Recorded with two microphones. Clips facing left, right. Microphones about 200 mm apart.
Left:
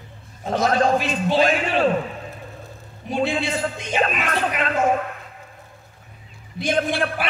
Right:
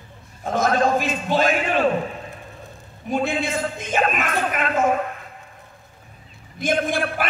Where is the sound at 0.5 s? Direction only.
45° right (ahead or behind).